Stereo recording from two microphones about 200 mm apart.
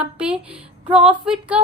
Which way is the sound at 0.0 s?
5° right (ahead or behind).